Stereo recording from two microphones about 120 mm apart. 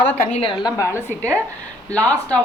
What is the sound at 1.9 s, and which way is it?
Speech, 10° left (ahead or behind).